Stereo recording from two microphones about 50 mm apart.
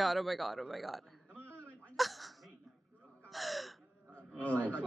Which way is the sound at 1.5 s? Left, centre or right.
Left.